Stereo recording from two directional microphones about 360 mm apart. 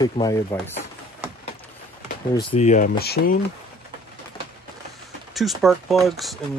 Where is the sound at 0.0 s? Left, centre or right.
Centre.